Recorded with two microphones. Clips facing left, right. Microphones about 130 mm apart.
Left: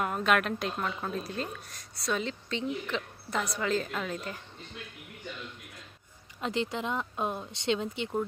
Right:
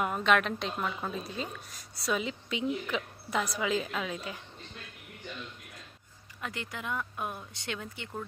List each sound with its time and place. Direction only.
0.0 s a woman's voice: centre (ahead or behind)
6.4 s speech: 25° left (ahead or behind)